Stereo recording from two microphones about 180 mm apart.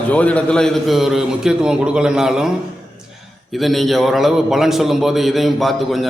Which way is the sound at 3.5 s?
Centre (ahead or behind).